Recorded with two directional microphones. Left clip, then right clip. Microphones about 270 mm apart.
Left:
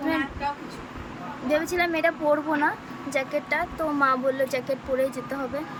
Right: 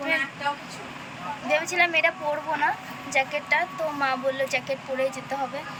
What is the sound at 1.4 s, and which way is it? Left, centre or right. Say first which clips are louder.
Speech: right 1 dB; centre.